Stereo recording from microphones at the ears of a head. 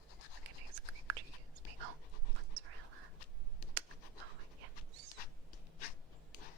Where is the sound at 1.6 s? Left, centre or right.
Right.